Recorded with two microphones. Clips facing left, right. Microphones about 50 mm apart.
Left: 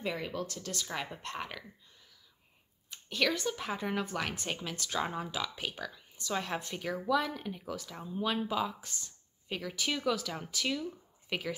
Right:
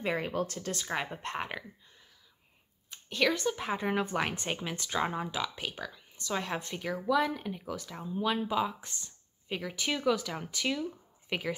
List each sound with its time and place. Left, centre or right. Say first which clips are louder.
0.0 s speech: right 4 dB; right
3.1 s speech: right 3 dB; centre
5.4 s speech: right 2 dB; centre